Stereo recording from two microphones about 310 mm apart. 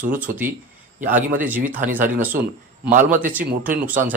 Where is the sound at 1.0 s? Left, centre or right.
Right.